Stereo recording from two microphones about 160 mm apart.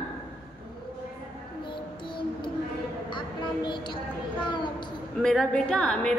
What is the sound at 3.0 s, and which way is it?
Speech, 30° left (ahead or behind).